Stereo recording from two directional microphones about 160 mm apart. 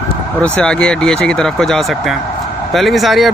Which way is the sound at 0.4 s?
5° left (ahead or behind).